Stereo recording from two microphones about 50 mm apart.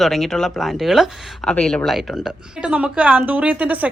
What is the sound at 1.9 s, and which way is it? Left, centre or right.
Speech, centre.